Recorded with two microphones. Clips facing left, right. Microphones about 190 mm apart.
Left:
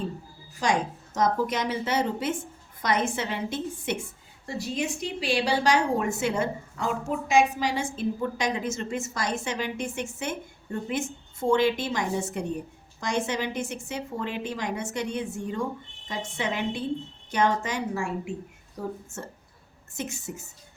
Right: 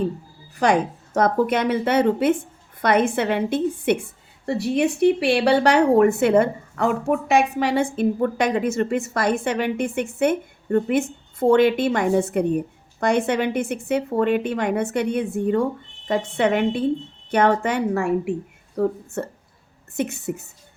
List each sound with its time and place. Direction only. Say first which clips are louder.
0.5 s a woman's voice: right 7 dB; 60° right (ahead or behind)